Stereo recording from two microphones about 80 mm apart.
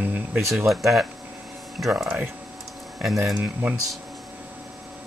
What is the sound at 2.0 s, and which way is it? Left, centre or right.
Speech, centre.